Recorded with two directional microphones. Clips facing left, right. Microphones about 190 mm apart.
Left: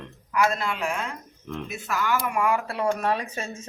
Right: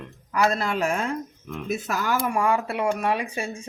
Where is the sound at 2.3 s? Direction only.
30° right (ahead or behind); by 3.6 s 10° right (ahead or behind).